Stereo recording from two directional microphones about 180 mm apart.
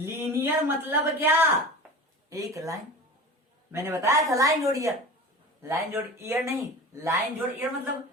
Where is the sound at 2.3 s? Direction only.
20° right (ahead or behind).